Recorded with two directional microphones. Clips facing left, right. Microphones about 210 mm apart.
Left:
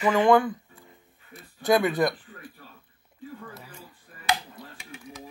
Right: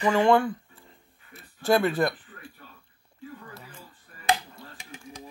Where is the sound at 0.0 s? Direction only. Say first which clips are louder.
Even; 15° left (ahead or behind).